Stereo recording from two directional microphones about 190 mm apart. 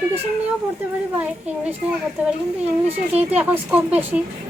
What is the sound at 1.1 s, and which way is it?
Speech, 5° right (ahead or behind).